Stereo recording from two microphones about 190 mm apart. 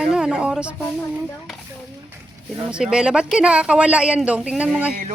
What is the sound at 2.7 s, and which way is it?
Speech, 5° right (ahead or behind).